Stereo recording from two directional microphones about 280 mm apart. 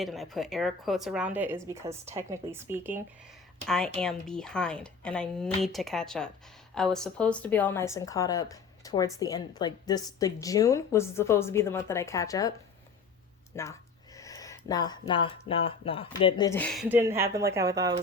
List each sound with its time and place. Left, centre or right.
0.0 s a woman's voice: centre
13.5 s speech: centre
16.9 s speech: centre